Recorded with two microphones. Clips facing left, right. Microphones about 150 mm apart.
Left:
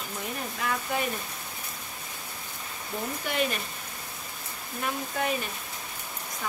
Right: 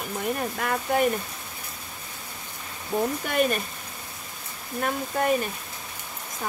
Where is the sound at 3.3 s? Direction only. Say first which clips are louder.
Right 3 dB; 50° right (ahead or behind).